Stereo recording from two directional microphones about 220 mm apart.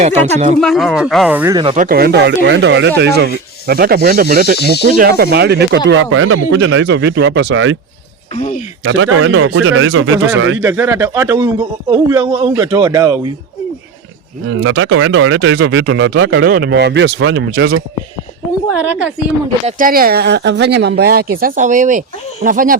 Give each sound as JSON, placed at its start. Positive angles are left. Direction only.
{"t": 0.0, "sound": "speech", "side_deg": -30}
{"t": 0.6, "sound": "speech", "side_deg": 0}
{"t": 1.7, "sound": "speech", "side_deg": -40}
{"t": 6.0, "sound": "speech", "side_deg": -70}
{"t": 8.3, "sound": "speech", "side_deg": 30}
{"t": 8.8, "sound": "speech", "side_deg": -60}
{"t": 10.6, "sound": "a man's voice", "side_deg": -10}
{"t": 14.5, "sound": "speech", "side_deg": -60}
{"t": 19.6, "sound": "speech", "side_deg": -40}